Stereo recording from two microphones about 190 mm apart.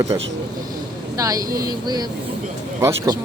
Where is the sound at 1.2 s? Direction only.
20° right (ahead or behind).